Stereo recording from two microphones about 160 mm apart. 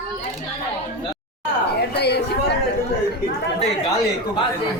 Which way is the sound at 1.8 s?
90° left.